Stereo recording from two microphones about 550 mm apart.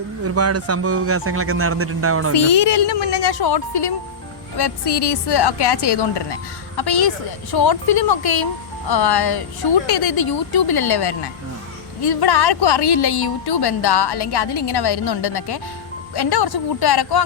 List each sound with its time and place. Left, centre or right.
0.3 s a man's voice: right
2.3 s a woman's voice: left